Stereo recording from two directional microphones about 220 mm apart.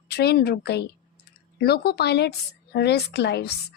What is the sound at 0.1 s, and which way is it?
Speech, 45° left (ahead or behind).